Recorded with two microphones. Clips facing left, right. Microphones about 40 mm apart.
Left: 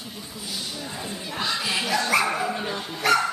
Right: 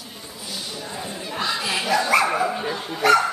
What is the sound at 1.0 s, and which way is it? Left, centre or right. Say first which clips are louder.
Dog: right 2 dB; centre.